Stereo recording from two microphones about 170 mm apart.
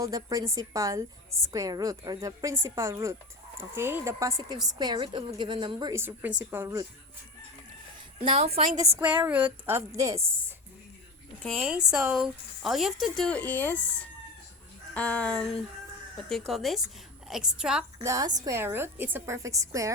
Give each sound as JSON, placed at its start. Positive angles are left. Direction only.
{"t": 0.0, "sound": "a woman's voice", "side_deg": -20}
{"t": 5.9, "sound": "a woman's voice", "side_deg": -10}
{"t": 8.2, "sound": "a woman's voice", "side_deg": -35}
{"t": 9.0, "sound": "a woman's voice", "side_deg": -10}
{"t": 11.4, "sound": "speech", "side_deg": 0}
{"t": 14.9, "sound": "speech", "side_deg": 10}
{"t": 18.0, "sound": "a woman's voice", "side_deg": -20}